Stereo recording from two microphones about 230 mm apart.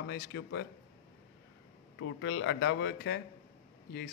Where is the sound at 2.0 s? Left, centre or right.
Left.